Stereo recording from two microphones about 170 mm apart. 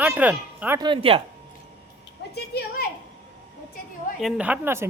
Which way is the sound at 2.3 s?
65° left (ahead or behind).